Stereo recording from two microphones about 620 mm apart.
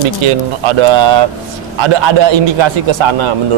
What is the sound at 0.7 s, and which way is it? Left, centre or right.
A man's voice, right.